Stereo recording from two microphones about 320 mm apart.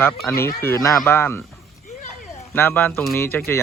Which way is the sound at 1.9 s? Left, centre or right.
Left.